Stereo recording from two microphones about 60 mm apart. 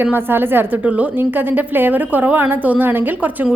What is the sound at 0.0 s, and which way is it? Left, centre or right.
Speech, right.